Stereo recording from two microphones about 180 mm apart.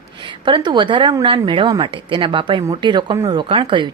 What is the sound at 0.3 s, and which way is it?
Speech, 25° right (ahead or behind).